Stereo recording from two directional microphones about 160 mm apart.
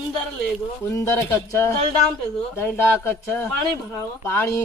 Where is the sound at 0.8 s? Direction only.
15° left (ahead or behind).